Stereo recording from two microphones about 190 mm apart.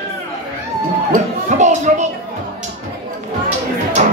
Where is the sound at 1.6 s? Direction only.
40° right (ahead or behind).